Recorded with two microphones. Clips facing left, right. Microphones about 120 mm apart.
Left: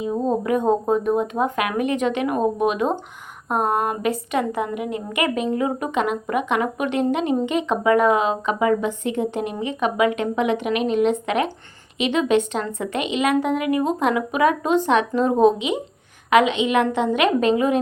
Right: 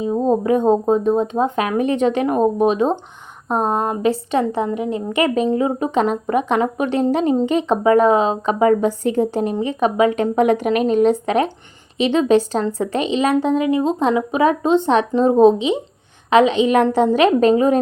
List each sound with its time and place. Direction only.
0.0 s a woman's voice: 30° right (ahead or behind)